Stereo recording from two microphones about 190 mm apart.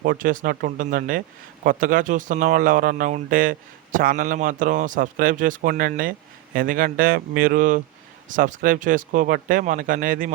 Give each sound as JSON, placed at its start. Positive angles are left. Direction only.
{"t": 0.0, "sound": "speech", "side_deg": -50}